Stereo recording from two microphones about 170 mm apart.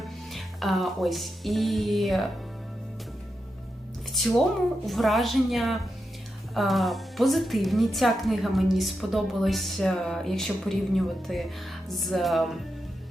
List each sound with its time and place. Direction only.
0.0 s music: centre (ahead or behind)
4.9 s a woman's voice: centre (ahead or behind)